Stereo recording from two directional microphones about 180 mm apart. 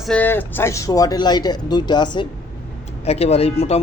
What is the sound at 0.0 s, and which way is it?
Speech, 5° left (ahead or behind).